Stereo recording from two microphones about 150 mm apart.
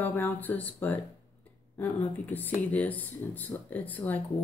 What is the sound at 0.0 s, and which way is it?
Speech, 15° left (ahead or behind).